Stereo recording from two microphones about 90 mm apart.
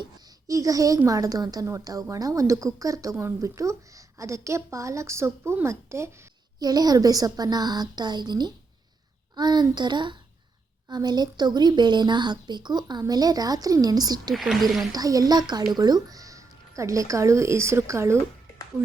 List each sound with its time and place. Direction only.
0.4 s a woman's voice: 40° right (ahead or behind)
6.6 s a woman's voice: 45° right (ahead or behind)
14.3 s speech: centre (ahead or behind)
14.9 s a woman's voice: 45° right (ahead or behind)